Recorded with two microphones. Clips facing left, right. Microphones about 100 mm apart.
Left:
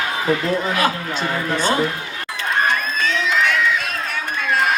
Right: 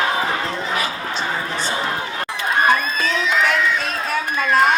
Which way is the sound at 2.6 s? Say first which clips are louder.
Right 2 dB; 5° right (ahead or behind).